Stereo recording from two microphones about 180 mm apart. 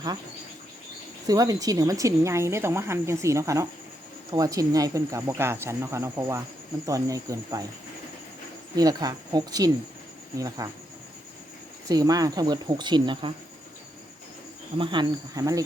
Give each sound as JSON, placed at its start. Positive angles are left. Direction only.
{"t": 1.3, "sound": "a woman's voice", "side_deg": -20}
{"t": 8.7, "sound": "speech", "side_deg": -20}
{"t": 11.9, "sound": "speech", "side_deg": -20}
{"t": 14.8, "sound": "speech", "side_deg": -25}